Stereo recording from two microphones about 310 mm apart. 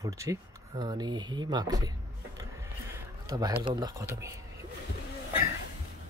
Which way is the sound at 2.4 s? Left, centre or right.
Centre.